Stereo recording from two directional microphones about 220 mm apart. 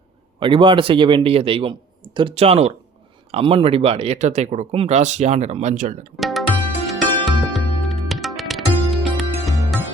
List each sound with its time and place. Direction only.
0.3 s a man's voice: 25° right (ahead or behind)
6.1 s music: centre (ahead or behind)